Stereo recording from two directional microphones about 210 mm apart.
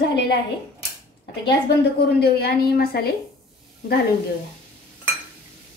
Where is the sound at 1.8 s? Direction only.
50° left (ahead or behind).